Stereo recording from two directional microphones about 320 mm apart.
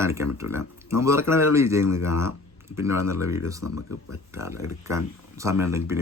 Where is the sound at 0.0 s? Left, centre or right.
Centre.